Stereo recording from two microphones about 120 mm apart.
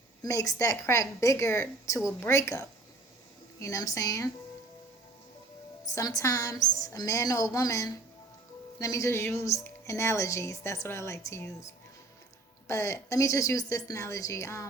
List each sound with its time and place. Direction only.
0.2 s speech: 30° left (ahead or behind)
5.8 s speech: 30° left (ahead or behind)